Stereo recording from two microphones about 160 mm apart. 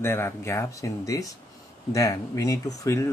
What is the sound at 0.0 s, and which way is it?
Speech, 15° left (ahead or behind).